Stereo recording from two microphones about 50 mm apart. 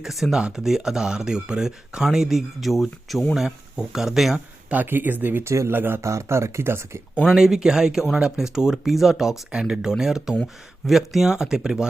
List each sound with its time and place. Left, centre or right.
0.0 s speech: centre
4.7 s speech: right
5.4 s speech: right
5.7 s speech: right
6.0 s speech: right
7.3 s speech: centre
9.5 s speech: centre